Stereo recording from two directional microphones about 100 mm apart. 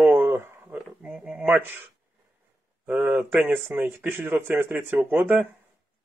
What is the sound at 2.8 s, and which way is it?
Speech, 15° right (ahead or behind).